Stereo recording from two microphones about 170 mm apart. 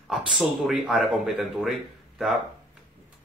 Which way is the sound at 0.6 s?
5° right (ahead or behind).